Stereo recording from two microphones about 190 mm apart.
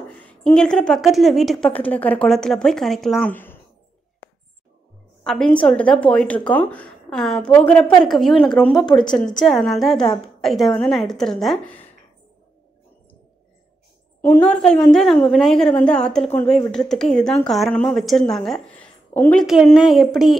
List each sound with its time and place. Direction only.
0.2 s a woman's voice: 5° left (ahead or behind)
5.2 s speech: 5° left (ahead or behind)
8.7 s speech: 25° left (ahead or behind)
9.0 s a woman's voice: 5° left (ahead or behind)
14.2 s a woman's voice: 5° left (ahead or behind)
19.4 s a woman's voice: centre (ahead or behind)